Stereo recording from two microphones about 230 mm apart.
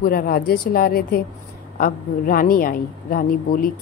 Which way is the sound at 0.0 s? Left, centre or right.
Left.